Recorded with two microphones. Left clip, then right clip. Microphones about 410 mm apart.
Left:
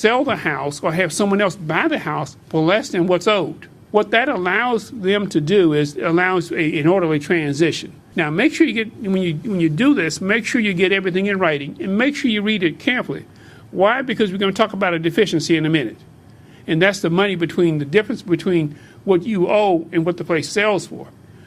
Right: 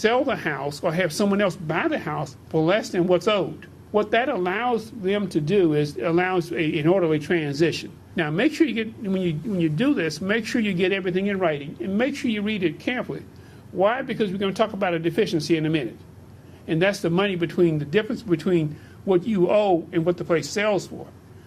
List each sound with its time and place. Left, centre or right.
0.0 s speech: left